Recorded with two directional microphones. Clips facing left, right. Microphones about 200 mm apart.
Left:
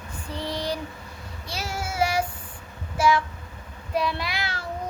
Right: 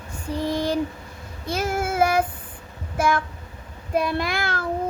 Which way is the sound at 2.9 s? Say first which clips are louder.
Left 1 dB; 55° right (ahead or behind).